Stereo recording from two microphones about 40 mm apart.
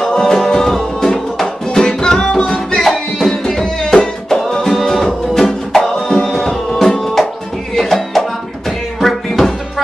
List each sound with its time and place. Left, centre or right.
0.0 s music: centre
2.8 s music: centre
4.6 s music: centre